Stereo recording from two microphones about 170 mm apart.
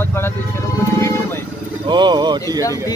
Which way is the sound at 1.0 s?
15° left (ahead or behind).